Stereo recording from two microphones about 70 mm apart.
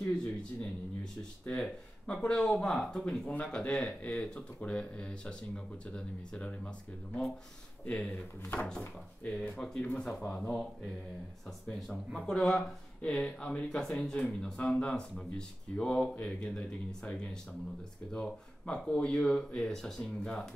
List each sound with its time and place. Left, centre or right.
0.0 s speech: centre
7.8 s speech: left
8.1 s speech: left
8.5 s speech: centre
12.3 s speech: centre